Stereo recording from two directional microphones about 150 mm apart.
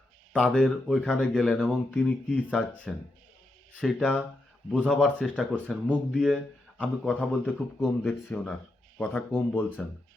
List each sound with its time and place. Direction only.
0.3 s speech: 5° left (ahead or behind)